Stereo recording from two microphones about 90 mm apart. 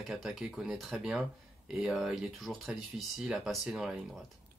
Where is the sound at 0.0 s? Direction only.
Centre (ahead or behind).